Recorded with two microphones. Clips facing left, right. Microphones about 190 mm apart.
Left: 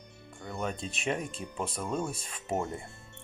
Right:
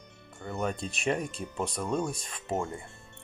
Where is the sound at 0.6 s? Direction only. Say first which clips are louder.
Right 3 dB; centre (ahead or behind).